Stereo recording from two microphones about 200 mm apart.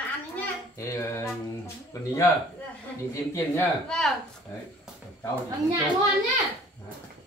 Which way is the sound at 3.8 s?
5° left (ahead or behind).